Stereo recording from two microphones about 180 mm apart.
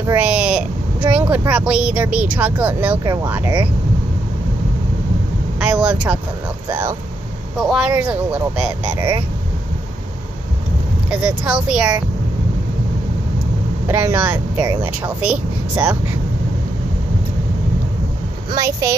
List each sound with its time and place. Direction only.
0.0 s speech: 10° right (ahead or behind)
5.6 s vehicle: 5° right (ahead or behind)
6.7 s speech: 10° right (ahead or behind)
7.5 s speech: centre (ahead or behind)
11.1 s speech: 5° right (ahead or behind)
13.8 s speech: 10° right (ahead or behind)
18.5 s speech: 20° right (ahead or behind)